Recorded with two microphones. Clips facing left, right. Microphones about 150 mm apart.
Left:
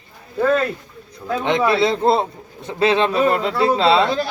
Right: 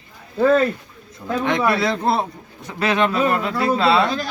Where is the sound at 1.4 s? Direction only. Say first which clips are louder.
Left 2 dB; 25° left (ahead or behind).